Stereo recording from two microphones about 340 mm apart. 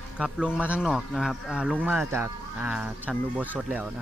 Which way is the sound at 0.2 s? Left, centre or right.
Centre.